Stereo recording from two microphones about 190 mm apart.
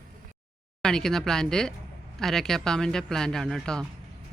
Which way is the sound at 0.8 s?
5° left (ahead or behind).